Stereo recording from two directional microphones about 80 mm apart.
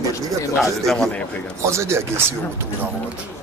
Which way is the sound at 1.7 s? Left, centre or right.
Right.